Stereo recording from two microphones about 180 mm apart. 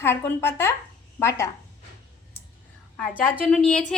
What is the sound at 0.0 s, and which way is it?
A woman's voice, 10° left (ahead or behind).